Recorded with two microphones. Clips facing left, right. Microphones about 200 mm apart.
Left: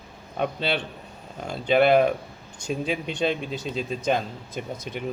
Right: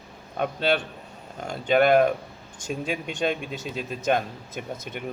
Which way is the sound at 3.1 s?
50° right (ahead or behind).